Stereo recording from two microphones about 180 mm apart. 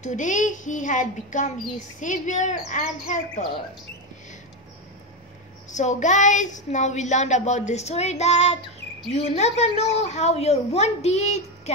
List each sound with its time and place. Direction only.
0.0 s a child's voice: 45° left (ahead or behind)
5.7 s speech: 40° left (ahead or behind)